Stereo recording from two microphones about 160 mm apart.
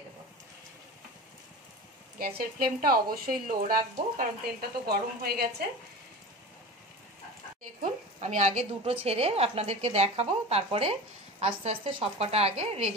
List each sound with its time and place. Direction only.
2.1 s speech: 70° right (ahead or behind)
4.2 s a woman's voice: 75° right (ahead or behind)
7.8 s a woman's voice: 50° right (ahead or behind)